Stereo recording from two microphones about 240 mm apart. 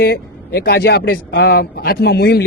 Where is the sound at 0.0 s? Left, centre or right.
Left.